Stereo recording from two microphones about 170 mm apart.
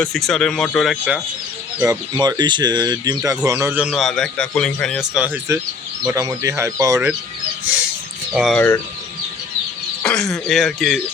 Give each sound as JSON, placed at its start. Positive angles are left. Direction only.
{"t": 0.0, "sound": "speech", "side_deg": 5}
{"t": 1.8, "sound": "speech", "side_deg": -20}
{"t": 3.8, "sound": "speech", "side_deg": 0}
{"t": 8.3, "sound": "speech", "side_deg": -5}
{"t": 8.5, "sound": "speech", "side_deg": 10}
{"t": 10.1, "sound": "speech", "side_deg": 0}